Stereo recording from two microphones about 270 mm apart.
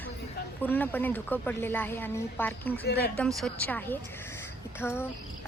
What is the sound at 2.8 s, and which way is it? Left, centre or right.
Speech, left.